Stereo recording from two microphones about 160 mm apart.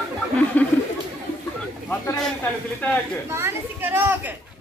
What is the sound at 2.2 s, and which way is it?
Speech, 5° left (ahead or behind).